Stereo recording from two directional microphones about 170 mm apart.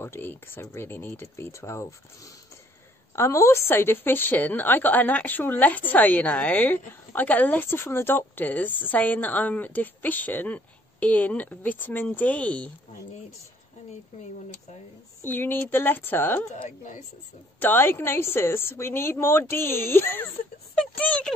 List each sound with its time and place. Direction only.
0.0 s a woman's voice: 10° left (ahead or behind)
3.2 s a woman's voice: 15° left (ahead or behind)
15.2 s a woman's voice: 10° left (ahead or behind)
16.6 s speech: 45° left (ahead or behind)
17.6 s a woman's voice: 10° left (ahead or behind)